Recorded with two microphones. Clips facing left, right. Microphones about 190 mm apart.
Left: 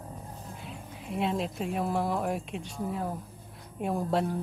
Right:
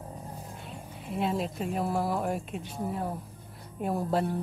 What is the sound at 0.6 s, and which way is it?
Speech, centre (ahead or behind).